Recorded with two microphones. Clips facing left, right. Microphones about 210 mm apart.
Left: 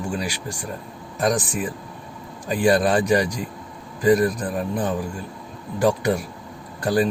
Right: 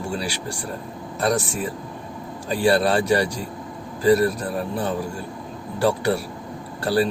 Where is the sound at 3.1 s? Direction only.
15° left (ahead or behind).